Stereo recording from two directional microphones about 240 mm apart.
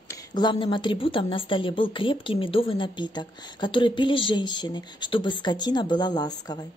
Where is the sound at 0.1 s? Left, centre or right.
Centre.